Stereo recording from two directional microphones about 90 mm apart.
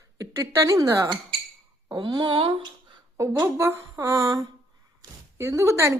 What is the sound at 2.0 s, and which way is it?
Speech, 60° right (ahead or behind).